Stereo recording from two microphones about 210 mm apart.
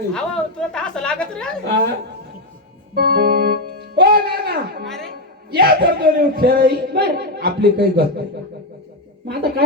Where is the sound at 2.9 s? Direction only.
50° right (ahead or behind).